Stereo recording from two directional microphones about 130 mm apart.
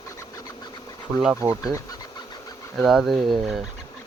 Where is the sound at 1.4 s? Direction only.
25° right (ahead or behind).